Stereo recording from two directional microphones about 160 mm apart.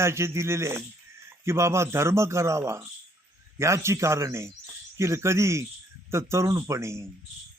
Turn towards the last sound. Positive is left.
turn(degrees=-20)  # may be behind; listen again after turning